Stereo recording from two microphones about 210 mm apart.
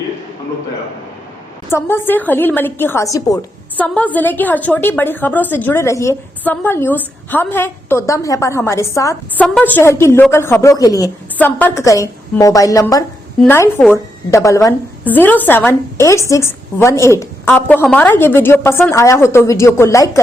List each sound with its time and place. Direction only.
1.7 s a woman's voice: 10° left (ahead or behind)